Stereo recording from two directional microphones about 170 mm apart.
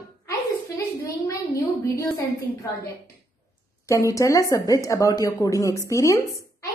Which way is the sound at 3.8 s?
20° left (ahead or behind).